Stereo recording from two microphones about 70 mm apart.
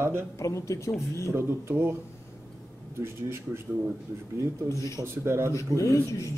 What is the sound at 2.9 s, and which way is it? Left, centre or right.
Speech, right.